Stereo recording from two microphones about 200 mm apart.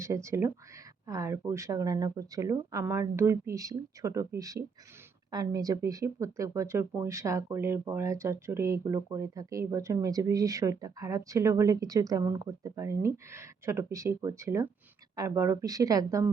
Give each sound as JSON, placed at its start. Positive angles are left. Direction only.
{"t": 0.0, "sound": "speech", "side_deg": -15}